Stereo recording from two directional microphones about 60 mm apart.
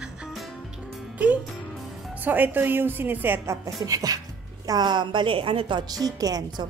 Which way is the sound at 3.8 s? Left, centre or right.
Right.